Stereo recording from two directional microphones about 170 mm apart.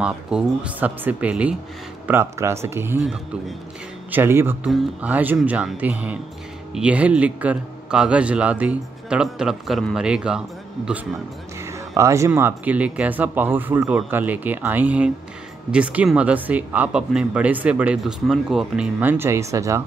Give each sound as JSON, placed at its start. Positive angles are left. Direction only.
{"t": 0.0, "sound": "speech", "side_deg": -5}
{"t": 3.0, "sound": "a man's voice", "side_deg": 0}
{"t": 4.1, "sound": "a man's voice", "side_deg": -15}
{"t": 11.6, "sound": "music", "side_deg": -15}
{"t": 12.3, "sound": "speech", "side_deg": -10}